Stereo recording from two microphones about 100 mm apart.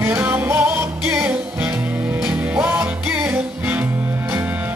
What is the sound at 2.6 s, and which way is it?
Music, 20° right (ahead or behind).